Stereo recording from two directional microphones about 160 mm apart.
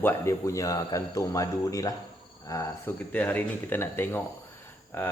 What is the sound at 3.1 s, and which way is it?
A man's voice, 10° left (ahead or behind).